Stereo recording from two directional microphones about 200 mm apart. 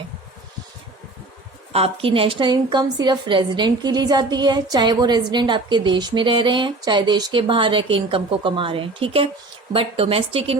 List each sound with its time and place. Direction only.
1.7 s a woman's voice: 30° right (ahead or behind)